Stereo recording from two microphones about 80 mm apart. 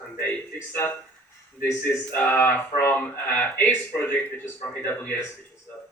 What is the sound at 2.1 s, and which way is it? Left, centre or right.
Speech, left.